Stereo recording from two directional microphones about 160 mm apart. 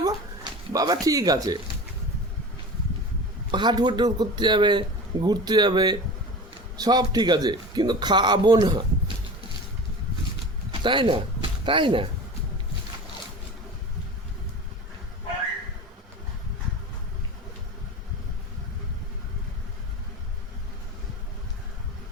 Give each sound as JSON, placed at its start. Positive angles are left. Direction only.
{"t": 0.0, "sound": "a sound", "side_deg": -25}
{"t": 3.5, "sound": "a man's voice", "side_deg": -30}
{"t": 10.8, "sound": "speech", "side_deg": -30}